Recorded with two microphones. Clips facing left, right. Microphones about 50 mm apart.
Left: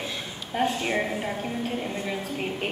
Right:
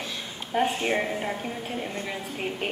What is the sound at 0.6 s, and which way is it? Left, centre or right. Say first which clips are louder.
Speech: even; right.